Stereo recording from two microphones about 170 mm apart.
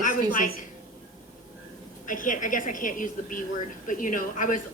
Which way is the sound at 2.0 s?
50° left (ahead or behind).